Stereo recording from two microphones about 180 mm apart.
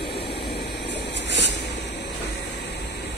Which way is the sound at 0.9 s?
75° left (ahead or behind).